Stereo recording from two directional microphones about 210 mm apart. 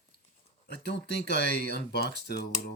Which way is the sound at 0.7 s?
55° left (ahead or behind).